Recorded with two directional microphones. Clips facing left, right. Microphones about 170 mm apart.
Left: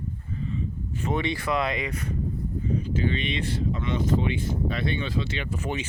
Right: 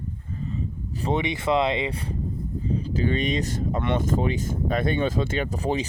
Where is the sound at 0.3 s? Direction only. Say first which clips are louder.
Even; 40° right (ahead or behind).